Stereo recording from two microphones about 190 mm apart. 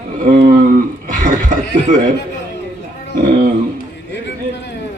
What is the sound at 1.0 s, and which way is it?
Cough, 40° right (ahead or behind).